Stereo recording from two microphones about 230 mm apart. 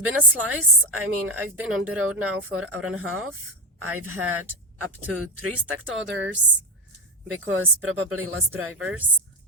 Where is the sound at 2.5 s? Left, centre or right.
Right.